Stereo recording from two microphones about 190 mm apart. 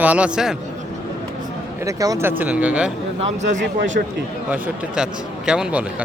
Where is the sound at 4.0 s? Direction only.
55° right (ahead or behind).